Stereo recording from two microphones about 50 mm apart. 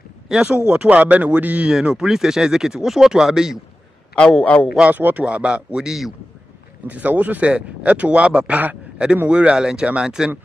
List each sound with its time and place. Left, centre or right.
0.3 s speech: centre
0.7 s speech: right
1.7 s speech: centre
4.1 s a man's voice: centre
4.8 s speech: right
5.2 s speech: right
6.9 s speech: right
8.5 s a sound: right
9.3 s speech: right